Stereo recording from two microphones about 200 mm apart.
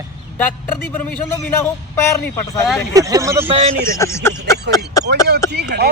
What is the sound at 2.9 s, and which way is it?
Speech, 15° right (ahead or behind).